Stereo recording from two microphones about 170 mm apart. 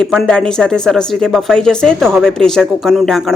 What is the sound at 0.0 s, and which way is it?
A woman's voice, centre (ahead or behind).